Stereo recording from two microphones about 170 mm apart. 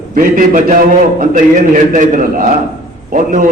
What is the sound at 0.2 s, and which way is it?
A man's voice, 50° right (ahead or behind).